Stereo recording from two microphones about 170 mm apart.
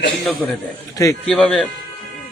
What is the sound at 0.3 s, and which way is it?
A man's voice, centre (ahead or behind).